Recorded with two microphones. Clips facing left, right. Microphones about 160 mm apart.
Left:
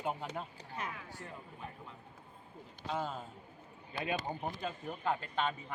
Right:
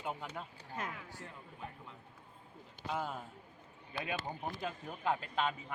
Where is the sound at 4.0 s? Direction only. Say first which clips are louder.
Left 3 dB; 40° left (ahead or behind).